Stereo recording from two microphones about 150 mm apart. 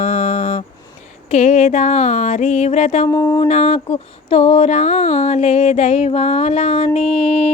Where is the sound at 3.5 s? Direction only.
45° left (ahead or behind).